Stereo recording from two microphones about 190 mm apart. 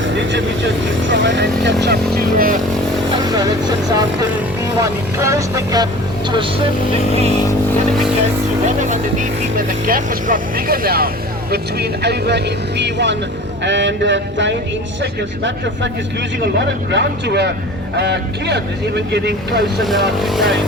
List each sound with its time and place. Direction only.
0.0 s speech: 75° right (ahead or behind)
2.1 s speech: 50° right (ahead or behind)
3.3 s speech: 20° right (ahead or behind)
8.6 s speech: 40° right (ahead or behind); by 14.5 s 70° right (ahead or behind)
16.6 s speech: 65° right (ahead or behind)
19.8 s speech: centre (ahead or behind)